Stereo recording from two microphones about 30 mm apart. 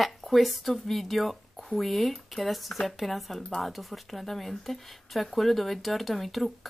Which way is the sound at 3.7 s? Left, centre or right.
Centre.